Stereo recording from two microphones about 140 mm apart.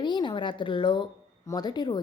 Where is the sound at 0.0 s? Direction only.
35° left (ahead or behind).